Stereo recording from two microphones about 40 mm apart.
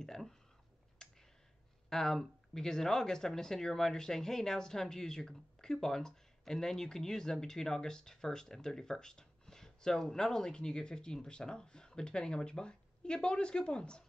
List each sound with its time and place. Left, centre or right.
0.0 s a sound: centre
1.0 s clicking: centre
1.9 s speech: centre